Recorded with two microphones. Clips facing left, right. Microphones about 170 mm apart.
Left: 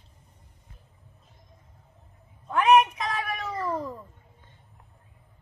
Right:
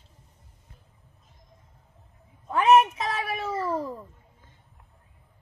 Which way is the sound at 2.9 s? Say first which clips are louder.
Right 1 dB; 30° right (ahead or behind).